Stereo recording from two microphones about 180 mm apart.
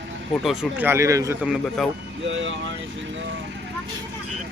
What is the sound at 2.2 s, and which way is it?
Speech, 90° right.